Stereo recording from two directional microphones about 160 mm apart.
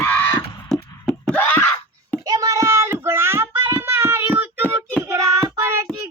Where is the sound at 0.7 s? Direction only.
5° left (ahead or behind).